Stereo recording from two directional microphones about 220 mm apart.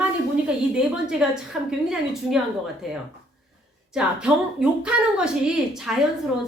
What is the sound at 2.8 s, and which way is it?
A woman's voice, centre (ahead or behind).